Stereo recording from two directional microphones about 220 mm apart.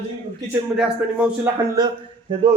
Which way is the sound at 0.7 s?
5° right (ahead or behind).